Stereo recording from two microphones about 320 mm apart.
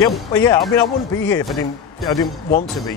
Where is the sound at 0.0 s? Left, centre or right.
Centre.